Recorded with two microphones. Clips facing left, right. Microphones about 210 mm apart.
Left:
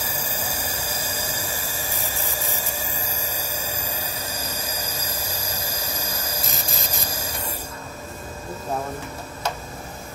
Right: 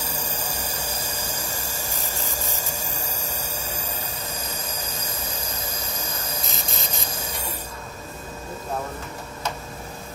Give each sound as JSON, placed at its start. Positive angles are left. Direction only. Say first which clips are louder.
{"t": 0.1, "sound": "a sound", "louder": "left 1 dB", "side_deg": 10}
{"t": 3.6, "sound": "music", "louder": "left 1 dB", "side_deg": 80}
{"t": 6.4, "sound": "music", "louder": "left 1 dB", "side_deg": 0}